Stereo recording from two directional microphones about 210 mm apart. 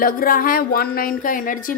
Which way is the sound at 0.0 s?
40° left (ahead or behind).